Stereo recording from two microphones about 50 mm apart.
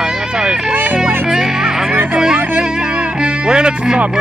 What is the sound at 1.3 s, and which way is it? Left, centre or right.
Music, centre.